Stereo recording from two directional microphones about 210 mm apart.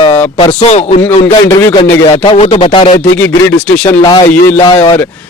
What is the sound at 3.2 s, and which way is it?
Speech, 5° left (ahead or behind).